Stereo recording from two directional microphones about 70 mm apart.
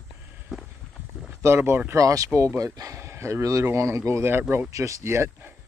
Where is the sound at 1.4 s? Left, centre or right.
Right.